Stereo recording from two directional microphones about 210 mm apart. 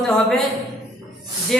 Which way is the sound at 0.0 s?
Centre (ahead or behind).